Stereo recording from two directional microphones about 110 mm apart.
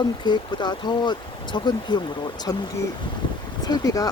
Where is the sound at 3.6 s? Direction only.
35° left (ahead or behind).